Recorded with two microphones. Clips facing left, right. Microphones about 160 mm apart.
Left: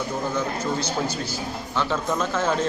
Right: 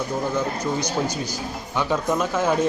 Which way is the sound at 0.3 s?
15° right (ahead or behind).